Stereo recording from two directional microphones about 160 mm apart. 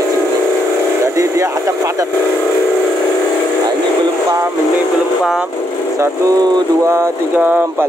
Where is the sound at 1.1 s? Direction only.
20° right (ahead or behind).